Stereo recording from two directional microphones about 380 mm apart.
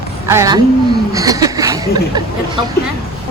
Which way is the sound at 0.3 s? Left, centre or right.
Centre.